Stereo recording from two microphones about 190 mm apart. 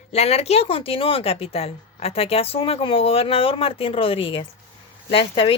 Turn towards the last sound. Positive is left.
turn(degrees=30)  # may be behind; listen again after turning